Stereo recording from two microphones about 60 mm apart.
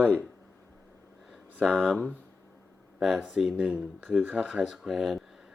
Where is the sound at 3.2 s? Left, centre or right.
Centre.